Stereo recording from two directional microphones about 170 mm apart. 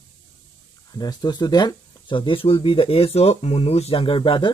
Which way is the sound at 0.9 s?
25° left (ahead or behind).